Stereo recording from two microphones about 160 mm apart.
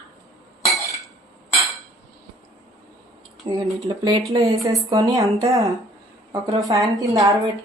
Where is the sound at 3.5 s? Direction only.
25° right (ahead or behind).